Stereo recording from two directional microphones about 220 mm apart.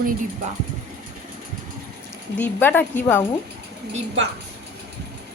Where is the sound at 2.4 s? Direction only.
10° left (ahead or behind).